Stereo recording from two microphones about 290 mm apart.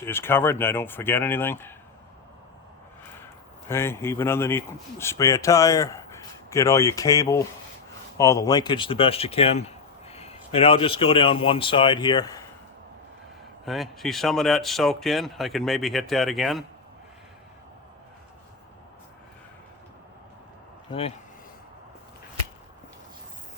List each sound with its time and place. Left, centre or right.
0.0 s speech: centre
3.7 s speech: centre
13.7 s speech: centre